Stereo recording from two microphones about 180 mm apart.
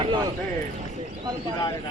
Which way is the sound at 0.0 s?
25° right (ahead or behind).